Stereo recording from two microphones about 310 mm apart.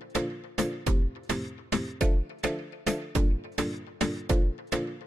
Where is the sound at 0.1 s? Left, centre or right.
Centre.